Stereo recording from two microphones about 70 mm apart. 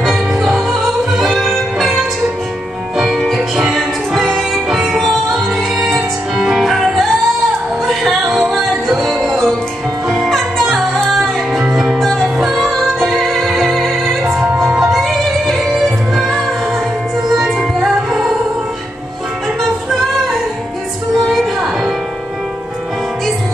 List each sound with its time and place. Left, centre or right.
0.0 s music: centre
11.6 s music: centre
12.0 s music: centre
14.2 s music: right
14.6 s music: centre
17.5 s music: centre
21.1 s music: centre